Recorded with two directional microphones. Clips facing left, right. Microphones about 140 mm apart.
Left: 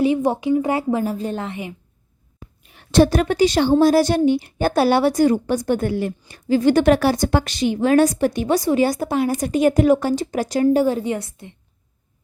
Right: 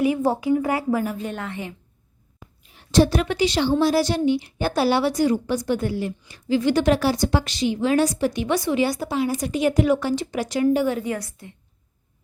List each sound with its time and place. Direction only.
0.0 s a woman's voice: 20° left (ahead or behind)
2.7 s a woman's voice: 60° left (ahead or behind); by 11.5 s 25° left (ahead or behind)